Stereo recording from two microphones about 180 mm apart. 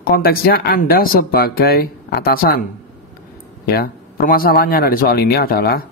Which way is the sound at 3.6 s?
60° left (ahead or behind).